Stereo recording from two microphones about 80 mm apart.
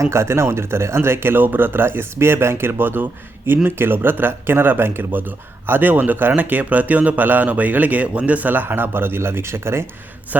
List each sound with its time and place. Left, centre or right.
0.0 s speech: right